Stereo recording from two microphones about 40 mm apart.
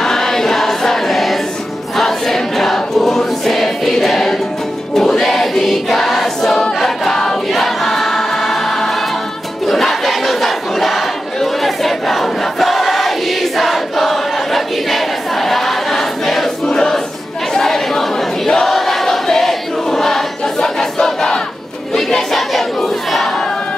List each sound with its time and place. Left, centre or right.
0.0 s choir: centre
9.7 s crowd: centre
16.6 s a sound: centre
17.6 s choir: centre
21.9 s crowd: centre
22.5 s battle cry: centre